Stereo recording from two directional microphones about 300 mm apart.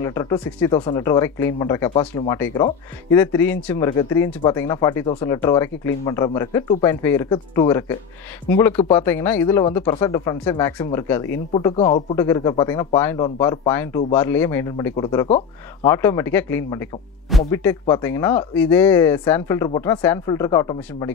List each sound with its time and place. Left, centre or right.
0.0 s speech: centre